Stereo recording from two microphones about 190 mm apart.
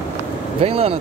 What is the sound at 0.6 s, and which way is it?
Speech, 30° right (ahead or behind).